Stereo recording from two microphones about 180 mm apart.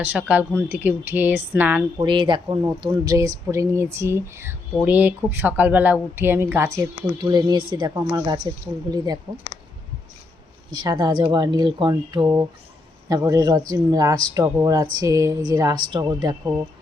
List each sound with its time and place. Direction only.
0.0 s speech: 10° right (ahead or behind)
2.0 s speech: 25° right (ahead or behind)
10.7 s speech: 25° right (ahead or behind)